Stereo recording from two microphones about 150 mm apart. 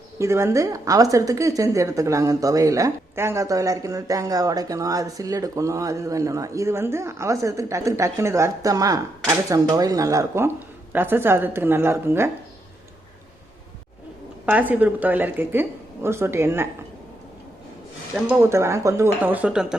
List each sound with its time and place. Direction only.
0.2 s a woman's voice: 20° right (ahead or behind)
14.4 s a woman's voice: 10° right (ahead or behind)
18.3 s a woman's voice: 20° right (ahead or behind)